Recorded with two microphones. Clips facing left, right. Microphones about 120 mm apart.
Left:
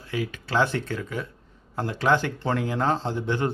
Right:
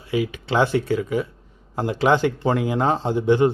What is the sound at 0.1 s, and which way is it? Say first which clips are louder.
Speech: right 5 dB; 15° right (ahead or behind).